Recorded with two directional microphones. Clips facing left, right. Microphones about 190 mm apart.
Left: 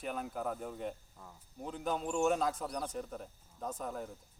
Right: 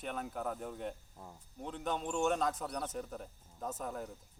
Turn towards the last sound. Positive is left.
turn(degrees=0)  # may be behind; listen again after turning